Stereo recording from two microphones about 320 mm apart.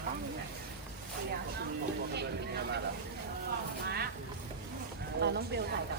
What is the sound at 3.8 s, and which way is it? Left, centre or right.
Speech, right.